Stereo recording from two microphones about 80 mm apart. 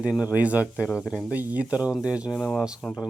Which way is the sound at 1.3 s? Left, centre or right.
Centre.